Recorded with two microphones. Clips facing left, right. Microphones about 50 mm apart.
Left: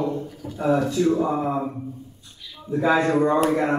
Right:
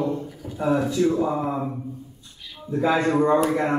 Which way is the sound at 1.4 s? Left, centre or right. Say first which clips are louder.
Left 1 dB; centre.